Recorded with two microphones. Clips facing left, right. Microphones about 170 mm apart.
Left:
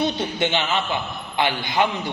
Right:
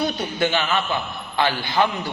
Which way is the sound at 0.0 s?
20° left (ahead or behind).